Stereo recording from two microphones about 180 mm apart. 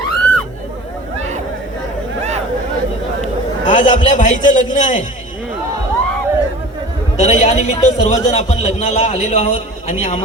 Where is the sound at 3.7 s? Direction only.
45° left (ahead or behind).